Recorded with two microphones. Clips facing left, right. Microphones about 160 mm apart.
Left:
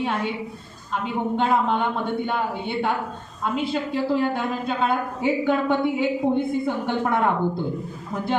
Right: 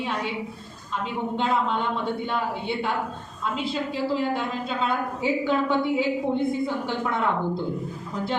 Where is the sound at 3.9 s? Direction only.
55° left (ahead or behind).